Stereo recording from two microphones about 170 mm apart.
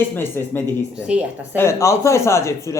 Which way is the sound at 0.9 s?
5° right (ahead or behind).